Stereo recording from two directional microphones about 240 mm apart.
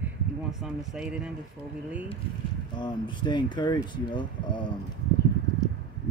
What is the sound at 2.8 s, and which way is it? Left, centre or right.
Speech, centre.